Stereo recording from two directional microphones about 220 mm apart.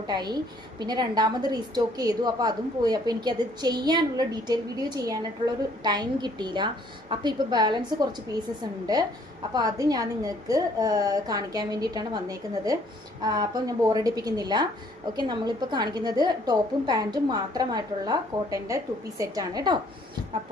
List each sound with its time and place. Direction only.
0.1 s a woman's voice: 20° right (ahead or behind)
9.6 s a woman's voice: 15° right (ahead or behind)